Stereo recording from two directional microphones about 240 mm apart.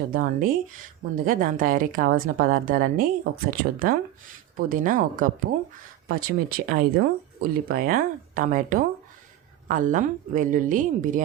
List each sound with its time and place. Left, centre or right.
0.1 s a woman's voice: right